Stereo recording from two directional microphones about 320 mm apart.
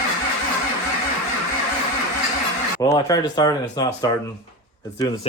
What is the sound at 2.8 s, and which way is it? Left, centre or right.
Speech, centre.